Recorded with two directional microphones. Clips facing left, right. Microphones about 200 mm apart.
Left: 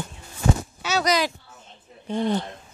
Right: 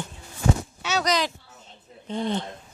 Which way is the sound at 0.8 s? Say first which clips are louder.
Left 2 dB; 5° left (ahead or behind).